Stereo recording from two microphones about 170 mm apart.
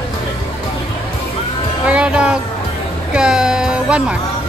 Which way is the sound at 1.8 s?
5° right (ahead or behind).